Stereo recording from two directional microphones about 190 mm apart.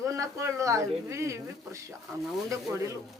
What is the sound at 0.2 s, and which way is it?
A woman's voice, 15° right (ahead or behind).